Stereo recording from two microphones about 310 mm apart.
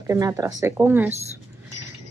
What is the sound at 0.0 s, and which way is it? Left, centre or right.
Speech, centre.